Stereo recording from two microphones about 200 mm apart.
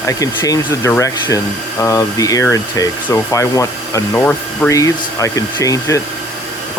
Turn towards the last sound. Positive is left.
turn(degrees=15)  # may be behind; listen again after turning